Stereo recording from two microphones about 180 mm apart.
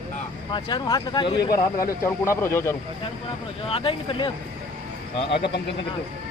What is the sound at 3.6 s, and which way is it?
Speech, 30° left (ahead or behind).